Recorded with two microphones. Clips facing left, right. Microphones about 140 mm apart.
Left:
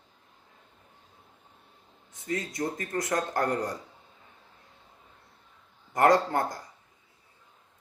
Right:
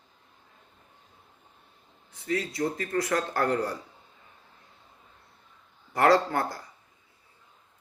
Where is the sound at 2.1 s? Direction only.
20° left (ahead or behind).